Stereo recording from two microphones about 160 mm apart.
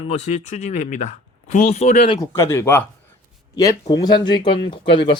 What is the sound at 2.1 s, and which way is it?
Speech, 15° left (ahead or behind).